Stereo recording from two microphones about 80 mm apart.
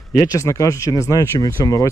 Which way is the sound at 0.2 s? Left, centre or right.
Left.